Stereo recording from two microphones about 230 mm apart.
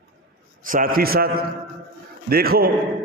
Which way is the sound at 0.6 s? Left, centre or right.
Right.